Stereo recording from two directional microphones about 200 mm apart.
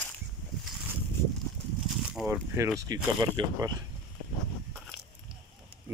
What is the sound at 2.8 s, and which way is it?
Speech, 20° right (ahead or behind).